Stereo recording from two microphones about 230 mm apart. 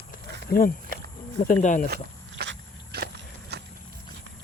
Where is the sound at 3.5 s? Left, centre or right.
Right.